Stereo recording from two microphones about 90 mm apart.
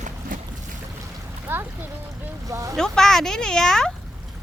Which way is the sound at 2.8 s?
5° left (ahead or behind).